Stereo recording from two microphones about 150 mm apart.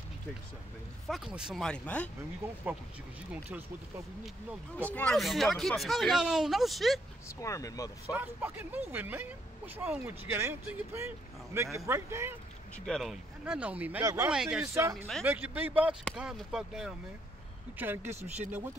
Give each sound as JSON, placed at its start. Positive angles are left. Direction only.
{"t": 1.0, "sound": "speech", "side_deg": 0}
{"t": 2.4, "sound": "speech", "side_deg": -15}
{"t": 4.9, "sound": "speech", "side_deg": 5}
{"t": 7.3, "sound": "speech", "side_deg": 20}
{"t": 8.1, "sound": "speech", "side_deg": -10}
{"t": 12.7, "sound": "speech", "side_deg": 5}
{"t": 14.3, "sound": "speech", "side_deg": -5}
{"t": 14.7, "sound": "speech", "side_deg": -15}
{"t": 17.7, "sound": "speech", "side_deg": -15}